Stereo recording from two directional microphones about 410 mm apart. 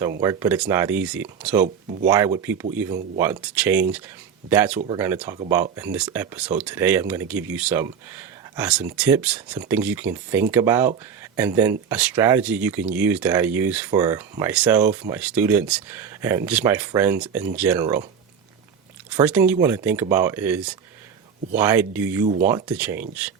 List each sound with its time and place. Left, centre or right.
0.2 s speech: centre
1.6 s speech: centre
2.0 s speech: centre
19.1 s speech: centre